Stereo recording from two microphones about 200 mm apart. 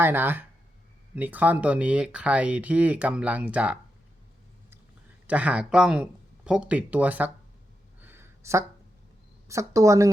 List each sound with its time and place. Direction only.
0.0 s speech: 10° right (ahead or behind)
5.2 s speech: 5° right (ahead or behind)
8.0 s a sound: 10° right (ahead or behind)
9.5 s speech: 15° right (ahead or behind)